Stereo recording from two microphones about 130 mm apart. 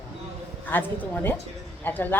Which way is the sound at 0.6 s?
15° left (ahead or behind).